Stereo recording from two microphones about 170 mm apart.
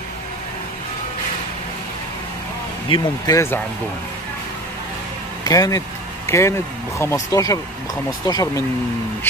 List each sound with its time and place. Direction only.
2.9 s speech: 20° left (ahead or behind)
5.4 s vehicle: 20° left (ahead or behind)
7.0 s speech: 15° left (ahead or behind)